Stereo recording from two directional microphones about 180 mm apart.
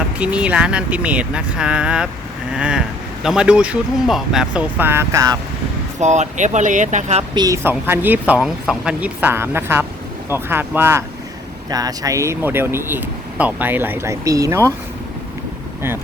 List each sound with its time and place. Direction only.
0.2 s speech: 5° right (ahead or behind)
6.0 s speech: 40° right (ahead or behind)
7.3 s speech: 20° right (ahead or behind)